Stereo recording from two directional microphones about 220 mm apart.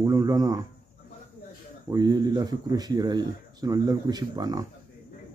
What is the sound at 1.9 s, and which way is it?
Speech, 15° right (ahead or behind).